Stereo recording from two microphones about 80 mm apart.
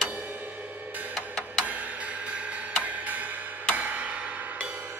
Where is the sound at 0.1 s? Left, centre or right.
Right.